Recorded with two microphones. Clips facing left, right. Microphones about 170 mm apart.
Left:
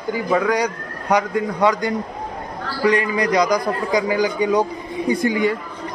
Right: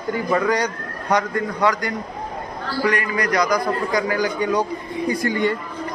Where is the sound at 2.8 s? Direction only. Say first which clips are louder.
Left 5 dB; 20° left (ahead or behind).